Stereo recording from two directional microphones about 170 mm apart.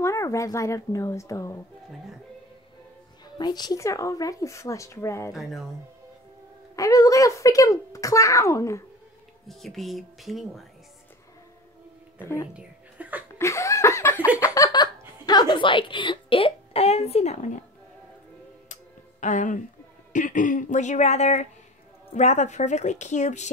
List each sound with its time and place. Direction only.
0.0 s speech: 20° left (ahead or behind)
3.3 s a child's voice: 25° left (ahead or behind)
5.3 s speech: centre (ahead or behind)
6.7 s a child's voice: 20° left (ahead or behind)
9.5 s speech: centre (ahead or behind)
12.2 s speech: 15° left (ahead or behind)
12.5 s a sound: 10° right (ahead or behind)
13.4 s laughter: 15° left (ahead or behind)
14.4 s a sound: 20° left (ahead or behind); by 17.5 s 40° left (ahead or behind)
18.7 s tick-tock: 45° left (ahead or behind)
20.1 s a woman's voice: 50° left (ahead or behind)